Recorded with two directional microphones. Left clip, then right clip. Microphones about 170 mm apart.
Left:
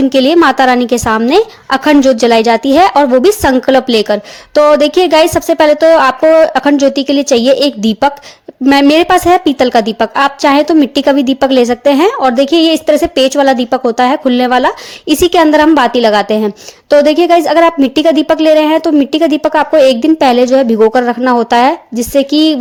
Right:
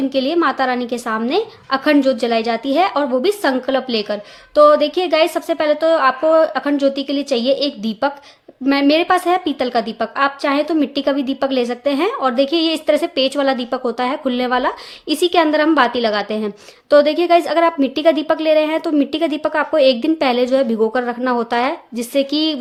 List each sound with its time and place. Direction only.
0.1 s a woman's voice: 45° left (ahead or behind)